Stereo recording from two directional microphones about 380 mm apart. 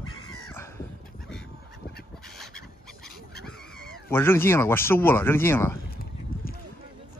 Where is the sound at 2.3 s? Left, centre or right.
Centre.